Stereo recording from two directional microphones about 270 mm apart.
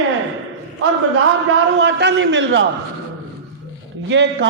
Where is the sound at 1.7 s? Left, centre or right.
Right.